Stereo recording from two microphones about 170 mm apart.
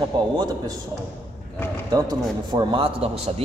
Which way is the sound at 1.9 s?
25° right (ahead or behind).